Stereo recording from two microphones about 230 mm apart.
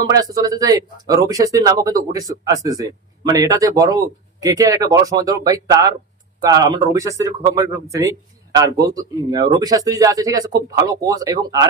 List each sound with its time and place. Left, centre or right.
0.1 s speech: centre